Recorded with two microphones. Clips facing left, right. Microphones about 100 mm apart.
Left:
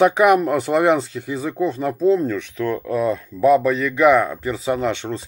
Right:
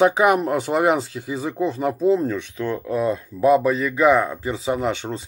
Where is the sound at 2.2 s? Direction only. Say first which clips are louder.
Left 2 dB; 20° right (ahead or behind).